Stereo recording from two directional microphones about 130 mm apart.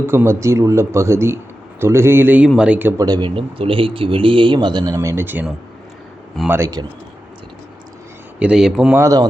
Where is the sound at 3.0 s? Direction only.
35° right (ahead or behind).